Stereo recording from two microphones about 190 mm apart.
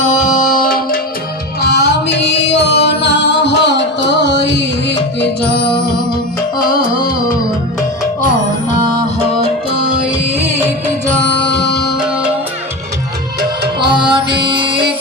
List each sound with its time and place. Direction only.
1.6 s music: 60° left (ahead or behind)
13.7 s music: 25° right (ahead or behind)